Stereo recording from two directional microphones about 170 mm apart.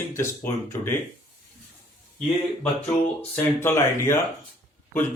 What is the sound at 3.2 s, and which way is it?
Speech, 15° left (ahead or behind).